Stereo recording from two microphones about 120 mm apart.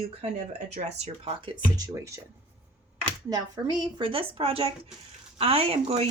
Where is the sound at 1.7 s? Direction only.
30° right (ahead or behind).